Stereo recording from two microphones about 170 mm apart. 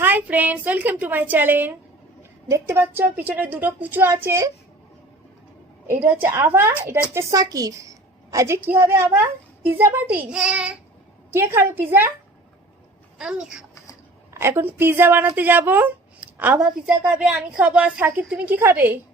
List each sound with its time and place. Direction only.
0.0 s a woman's voice: 10° right (ahead or behind)
6.1 s a woman's voice: 15° right (ahead or behind)
13.1 s speech: 5° right (ahead or behind)
14.3 s a woman's voice: 15° right (ahead or behind)